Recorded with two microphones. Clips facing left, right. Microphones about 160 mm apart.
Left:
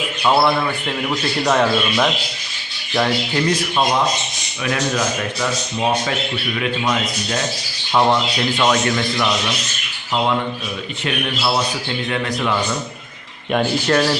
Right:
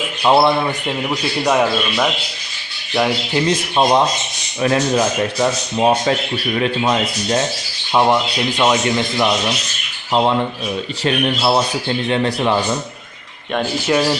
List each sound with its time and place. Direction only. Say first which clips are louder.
0.2 s speech: right 3 dB; 20° right (ahead or behind)
3.4 s speech: right 4 dB; 30° right (ahead or behind)
7.9 s speech: right 1 dB; 15° right (ahead or behind)
11.0 s speech: right 5 dB; 30° right (ahead or behind)
13.6 s speech: even; 10° right (ahead or behind)